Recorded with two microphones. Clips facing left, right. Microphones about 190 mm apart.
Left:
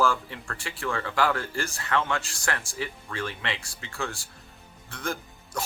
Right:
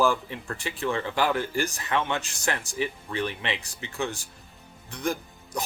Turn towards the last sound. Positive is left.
turn(degrees=-15)  # may be behind; listen again after turning